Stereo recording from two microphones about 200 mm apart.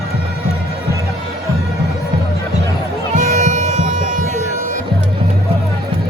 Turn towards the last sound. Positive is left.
turn(degrees=-40)  # may be behind; listen again after turning